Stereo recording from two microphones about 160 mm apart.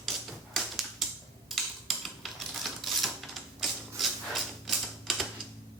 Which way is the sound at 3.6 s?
Centre (ahead or behind).